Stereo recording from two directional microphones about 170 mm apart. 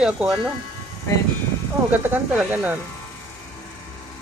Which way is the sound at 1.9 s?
10° right (ahead or behind).